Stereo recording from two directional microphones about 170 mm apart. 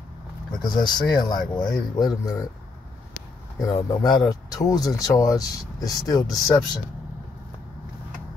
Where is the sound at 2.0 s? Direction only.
20° left (ahead or behind).